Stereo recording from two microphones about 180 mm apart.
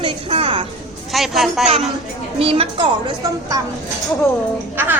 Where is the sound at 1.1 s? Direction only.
Centre (ahead or behind).